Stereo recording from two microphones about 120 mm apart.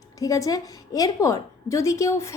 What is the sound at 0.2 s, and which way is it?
A woman's voice, 30° left (ahead or behind).